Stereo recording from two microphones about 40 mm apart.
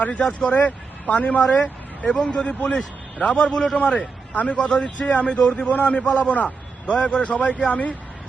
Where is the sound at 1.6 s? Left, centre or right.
Left.